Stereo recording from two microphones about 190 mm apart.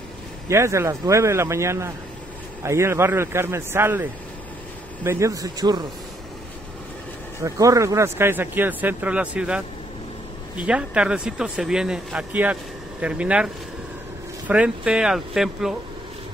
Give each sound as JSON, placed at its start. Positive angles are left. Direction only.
{"t": 0.5, "sound": "speech", "side_deg": -15}
{"t": 7.4, "sound": "speech", "side_deg": -15}
{"t": 10.6, "sound": "speech", "side_deg": -5}
{"t": 14.5, "sound": "speech", "side_deg": -5}